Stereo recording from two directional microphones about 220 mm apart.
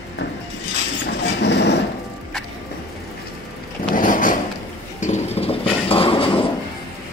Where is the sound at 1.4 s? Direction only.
50° left (ahead or behind).